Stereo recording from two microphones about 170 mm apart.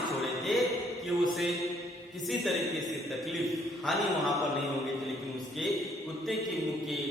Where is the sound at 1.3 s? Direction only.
Centre (ahead or behind).